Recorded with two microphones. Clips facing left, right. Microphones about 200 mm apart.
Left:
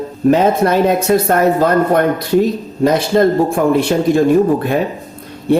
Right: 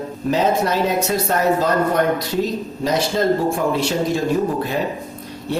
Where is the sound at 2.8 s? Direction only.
55° left (ahead or behind).